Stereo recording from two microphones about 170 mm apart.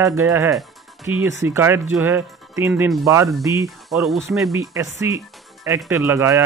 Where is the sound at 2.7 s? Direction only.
5° right (ahead or behind).